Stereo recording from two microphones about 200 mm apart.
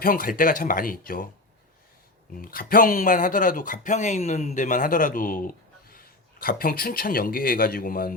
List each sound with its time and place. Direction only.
0.0 s speech: 45° left (ahead or behind)
2.4 s speech: 45° left (ahead or behind)